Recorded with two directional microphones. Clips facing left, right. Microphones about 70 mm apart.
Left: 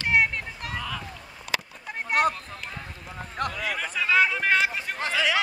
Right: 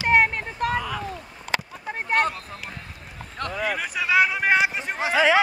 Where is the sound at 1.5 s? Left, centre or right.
Right.